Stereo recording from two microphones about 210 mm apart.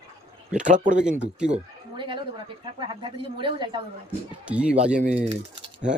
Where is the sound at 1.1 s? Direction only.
5° right (ahead or behind).